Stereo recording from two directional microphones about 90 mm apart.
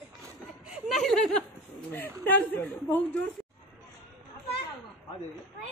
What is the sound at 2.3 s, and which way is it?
Speech, 20° left (ahead or behind).